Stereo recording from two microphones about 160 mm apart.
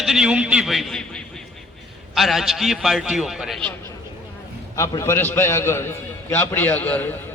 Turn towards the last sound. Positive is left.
turn(degrees=10)  # may be behind; listen again after turning